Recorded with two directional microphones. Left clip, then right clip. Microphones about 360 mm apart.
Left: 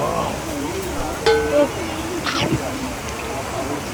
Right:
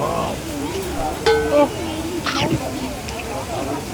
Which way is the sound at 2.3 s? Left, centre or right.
Centre.